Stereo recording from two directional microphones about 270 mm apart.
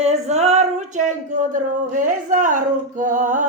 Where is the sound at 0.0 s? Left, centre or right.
Right.